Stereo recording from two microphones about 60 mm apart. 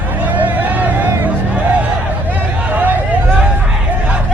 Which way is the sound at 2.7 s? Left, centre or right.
Right.